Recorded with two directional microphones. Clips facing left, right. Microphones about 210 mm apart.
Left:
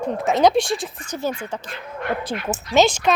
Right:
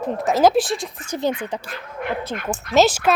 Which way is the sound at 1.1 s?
20° right (ahead or behind).